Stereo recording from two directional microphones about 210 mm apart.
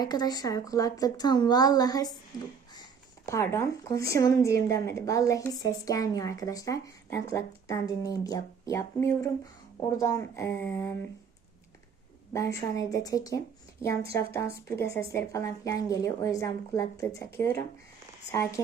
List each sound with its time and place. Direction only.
0.0 s speech: 20° left (ahead or behind)
3.2 s speech: 15° left (ahead or behind)
12.3 s speech: 15° left (ahead or behind)